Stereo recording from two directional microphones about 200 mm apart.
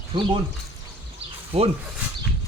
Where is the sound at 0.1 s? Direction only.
25° right (ahead or behind).